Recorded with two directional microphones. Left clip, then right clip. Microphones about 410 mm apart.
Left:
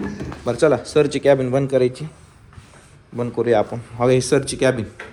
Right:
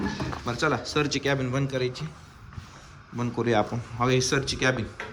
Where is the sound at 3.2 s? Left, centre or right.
Centre.